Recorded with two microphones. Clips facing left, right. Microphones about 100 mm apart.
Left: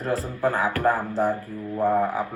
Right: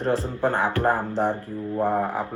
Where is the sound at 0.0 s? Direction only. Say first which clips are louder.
Right 1 dB; 30° right (ahead or behind).